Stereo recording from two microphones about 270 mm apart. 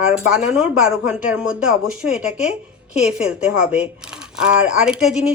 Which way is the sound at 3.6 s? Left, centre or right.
Centre.